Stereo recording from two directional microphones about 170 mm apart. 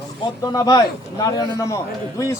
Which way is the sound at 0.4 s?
25° left (ahead or behind).